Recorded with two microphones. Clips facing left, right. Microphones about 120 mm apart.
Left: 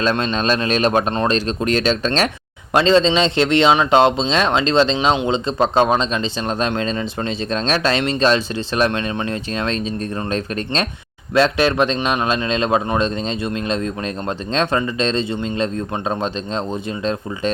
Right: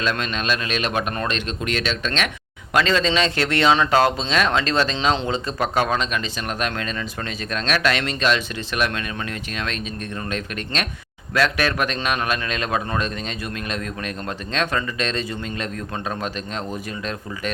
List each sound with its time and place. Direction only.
0.0 s speech: 30° left (ahead or behind)